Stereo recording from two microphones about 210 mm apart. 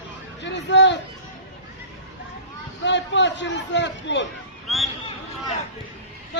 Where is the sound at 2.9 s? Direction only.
60° left (ahead or behind).